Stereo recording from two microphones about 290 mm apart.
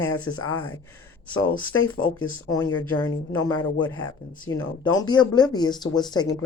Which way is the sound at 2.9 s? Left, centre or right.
Centre.